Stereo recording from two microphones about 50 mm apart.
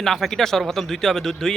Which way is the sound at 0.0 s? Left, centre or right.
Centre.